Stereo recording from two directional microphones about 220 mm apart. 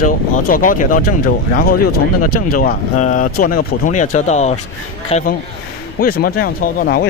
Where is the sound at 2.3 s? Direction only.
40° left (ahead or behind).